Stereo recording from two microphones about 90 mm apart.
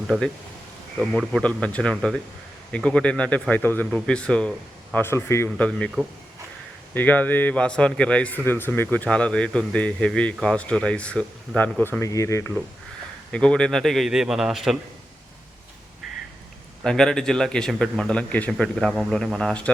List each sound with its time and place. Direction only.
0.1 s a man's voice: 5° left (ahead or behind)
1.6 s a man's voice: 10° left (ahead or behind)
4.9 s speech: 30° left (ahead or behind)
5.5 s a man's voice: 15° left (ahead or behind)
6.9 s a man's voice: 20° left (ahead or behind)
12.0 s speech: 35° left (ahead or behind)
13.3 s speech: 10° left (ahead or behind); by 14.8 s 5° right (ahead or behind)
16.8 s a man's voice: 5° left (ahead or behind)